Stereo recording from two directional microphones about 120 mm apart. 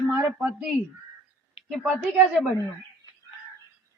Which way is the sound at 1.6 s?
50° left (ahead or behind).